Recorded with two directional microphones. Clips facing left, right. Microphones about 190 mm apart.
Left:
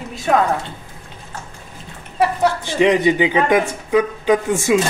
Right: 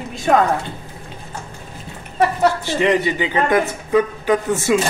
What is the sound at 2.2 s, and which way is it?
Speech, 15° left (ahead or behind).